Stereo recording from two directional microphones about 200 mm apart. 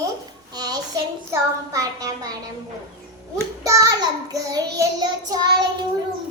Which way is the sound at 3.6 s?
15° right (ahead or behind).